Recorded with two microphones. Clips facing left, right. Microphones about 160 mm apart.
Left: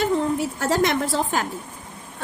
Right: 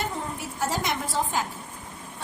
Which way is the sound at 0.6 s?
75° left (ahead or behind).